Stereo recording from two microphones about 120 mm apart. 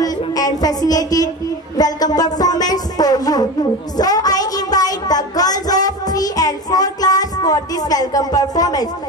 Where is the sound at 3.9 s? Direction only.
30° left (ahead or behind).